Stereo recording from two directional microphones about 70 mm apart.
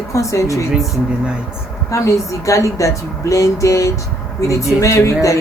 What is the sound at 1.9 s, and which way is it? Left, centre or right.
A woman's voice, left.